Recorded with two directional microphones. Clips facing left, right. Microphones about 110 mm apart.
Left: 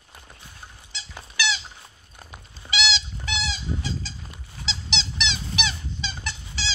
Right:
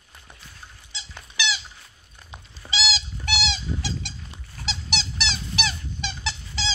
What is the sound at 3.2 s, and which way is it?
Goat, 70° right (ahead or behind).